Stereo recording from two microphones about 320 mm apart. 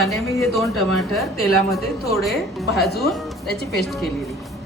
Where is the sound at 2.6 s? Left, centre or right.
Centre.